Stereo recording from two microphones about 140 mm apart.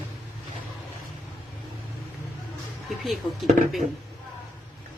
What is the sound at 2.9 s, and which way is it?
Speech, centre (ahead or behind).